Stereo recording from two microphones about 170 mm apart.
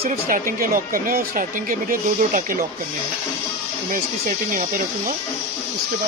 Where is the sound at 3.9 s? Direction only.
55° right (ahead or behind).